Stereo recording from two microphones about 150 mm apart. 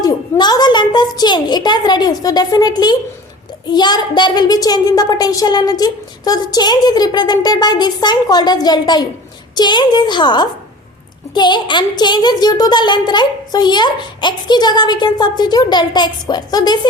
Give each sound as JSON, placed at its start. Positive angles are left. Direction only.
{"t": 0.0, "sound": "a child's voice", "side_deg": 25}